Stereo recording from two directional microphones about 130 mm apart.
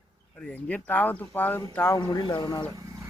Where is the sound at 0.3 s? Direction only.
10° left (ahead or behind).